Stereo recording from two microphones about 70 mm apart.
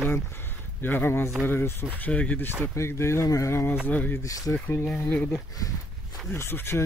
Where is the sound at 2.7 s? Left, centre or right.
Left.